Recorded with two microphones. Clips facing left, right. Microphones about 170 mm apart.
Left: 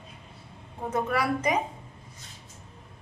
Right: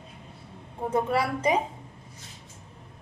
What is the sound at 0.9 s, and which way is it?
Speech, 30° right (ahead or behind).